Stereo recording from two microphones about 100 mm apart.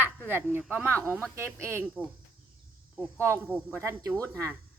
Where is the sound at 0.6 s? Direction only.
10° right (ahead or behind).